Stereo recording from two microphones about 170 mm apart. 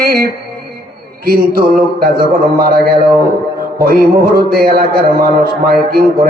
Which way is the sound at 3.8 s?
60° right (ahead or behind).